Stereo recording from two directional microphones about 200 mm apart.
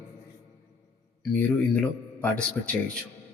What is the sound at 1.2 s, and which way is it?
Speech, 5° left (ahead or behind).